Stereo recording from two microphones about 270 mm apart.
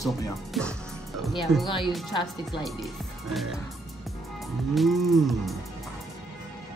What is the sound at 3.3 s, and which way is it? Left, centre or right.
Speech, centre.